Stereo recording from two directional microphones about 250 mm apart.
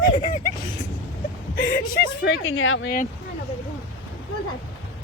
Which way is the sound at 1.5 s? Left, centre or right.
Left.